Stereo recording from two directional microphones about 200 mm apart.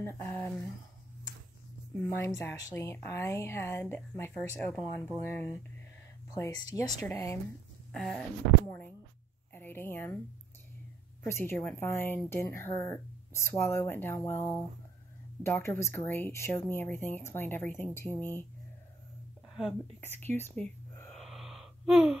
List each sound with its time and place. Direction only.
0.0 s speech: 10° left (ahead or behind)
2.1 s speech: 10° left (ahead or behind)
7.9 s speech: centre (ahead or behind)
11.2 s speech: 10° left (ahead or behind)
20.0 s gasp: 10° left (ahead or behind)